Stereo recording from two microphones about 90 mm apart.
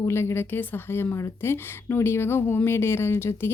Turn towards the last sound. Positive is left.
turn(degrees=25)  # may be behind; listen again after turning